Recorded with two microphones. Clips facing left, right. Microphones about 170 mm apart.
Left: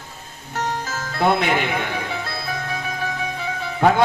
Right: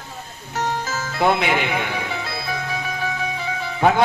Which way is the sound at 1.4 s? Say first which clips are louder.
Even; 45° left (ahead or behind).